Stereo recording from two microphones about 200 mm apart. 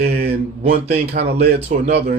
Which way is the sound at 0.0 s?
50° right (ahead or behind).